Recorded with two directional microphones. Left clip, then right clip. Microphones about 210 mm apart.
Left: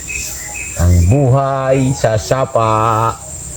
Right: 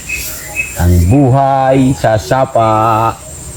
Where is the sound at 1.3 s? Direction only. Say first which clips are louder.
Right 6 dB; 40° left (ahead or behind).